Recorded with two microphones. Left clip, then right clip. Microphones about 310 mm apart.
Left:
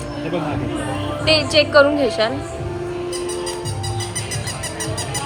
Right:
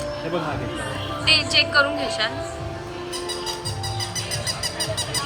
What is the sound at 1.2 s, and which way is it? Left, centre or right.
Speech, centre.